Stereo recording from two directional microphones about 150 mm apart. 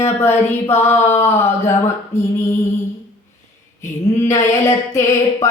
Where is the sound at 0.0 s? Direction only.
15° left (ahead or behind).